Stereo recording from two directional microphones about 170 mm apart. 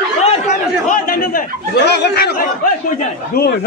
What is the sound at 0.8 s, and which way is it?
Chatter, 55° left (ahead or behind).